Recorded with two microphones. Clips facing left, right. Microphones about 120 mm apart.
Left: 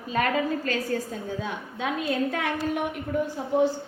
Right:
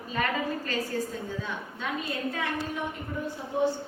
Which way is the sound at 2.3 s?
70° left (ahead or behind).